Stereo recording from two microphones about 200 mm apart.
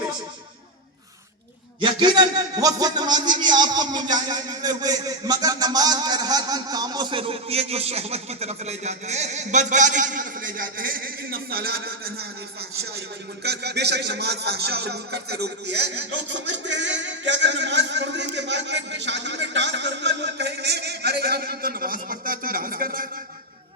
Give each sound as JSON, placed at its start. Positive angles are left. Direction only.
{"t": 1.8, "sound": "a man's voice", "side_deg": -20}
{"t": 13.4, "sound": "speech", "side_deg": -55}